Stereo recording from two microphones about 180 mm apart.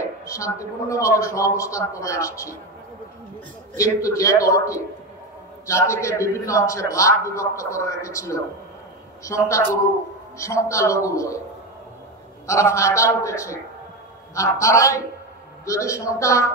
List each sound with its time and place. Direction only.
0.2 s a man's voice: 15° left (ahead or behind)
3.7 s a man's voice: 15° left (ahead or behind)
12.4 s a man's voice: 15° left (ahead or behind)